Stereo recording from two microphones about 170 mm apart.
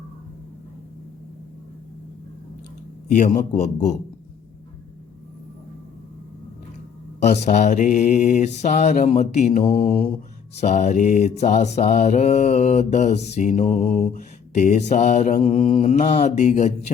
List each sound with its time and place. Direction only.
3.2 s mantra: 45° left (ahead or behind)
7.2 s mantra: 45° left (ahead or behind)
9.7 s mantra: 55° left (ahead or behind)
10.6 s mantra: 45° left (ahead or behind)